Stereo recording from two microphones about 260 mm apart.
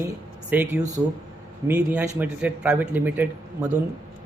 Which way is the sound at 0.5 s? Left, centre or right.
Centre.